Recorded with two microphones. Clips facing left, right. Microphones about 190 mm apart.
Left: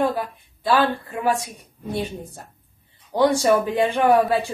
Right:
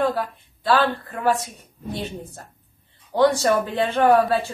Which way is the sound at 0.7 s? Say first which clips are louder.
Even; 10° left (ahead or behind).